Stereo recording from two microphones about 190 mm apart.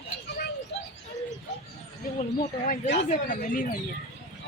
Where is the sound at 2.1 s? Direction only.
35° left (ahead or behind).